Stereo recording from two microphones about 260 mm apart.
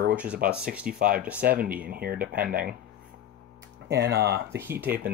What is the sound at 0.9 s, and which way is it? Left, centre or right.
Speech, right.